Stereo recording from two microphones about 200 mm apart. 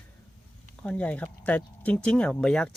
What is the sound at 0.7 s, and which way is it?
Speech, 5° left (ahead or behind).